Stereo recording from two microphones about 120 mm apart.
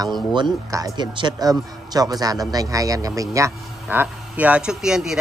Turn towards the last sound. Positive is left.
turn(degrees=-5)  # may be behind; listen again after turning